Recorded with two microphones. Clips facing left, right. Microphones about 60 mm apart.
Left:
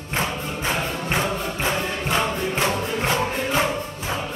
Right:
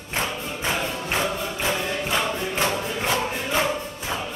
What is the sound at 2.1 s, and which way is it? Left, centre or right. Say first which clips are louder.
Music: left 4 dB; left.